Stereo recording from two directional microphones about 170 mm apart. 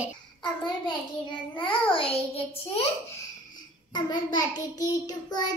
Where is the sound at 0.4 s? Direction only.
25° left (ahead or behind).